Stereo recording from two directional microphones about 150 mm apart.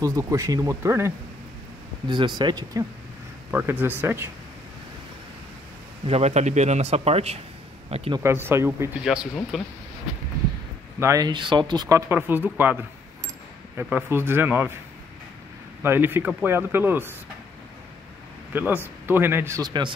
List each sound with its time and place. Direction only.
0.0 s speech: 20° right (ahead or behind)
2.0 s speech: 30° right (ahead or behind)
3.5 s speech: 15° right (ahead or behind)
6.0 s speech: 45° right (ahead or behind)
8.2 s speech: 15° right (ahead or behind)
9.0 s speech: 5° right (ahead or behind)
11.0 s speech: 20° right (ahead or behind)
12.1 s speech: 15° right (ahead or behind)
15.8 s speech: 15° right (ahead or behind)
18.5 s speech: 10° right (ahead or behind); by 19.9 s 30° right (ahead or behind)